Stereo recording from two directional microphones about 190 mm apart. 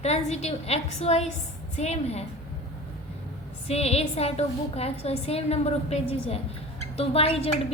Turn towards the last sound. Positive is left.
turn(degrees=30)  # may be behind; listen again after turning